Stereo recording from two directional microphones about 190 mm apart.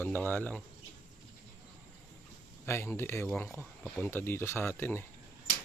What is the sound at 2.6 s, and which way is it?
Speech, 15° left (ahead or behind).